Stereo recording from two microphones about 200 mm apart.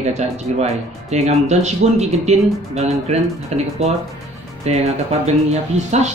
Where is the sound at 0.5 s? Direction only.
30° right (ahead or behind).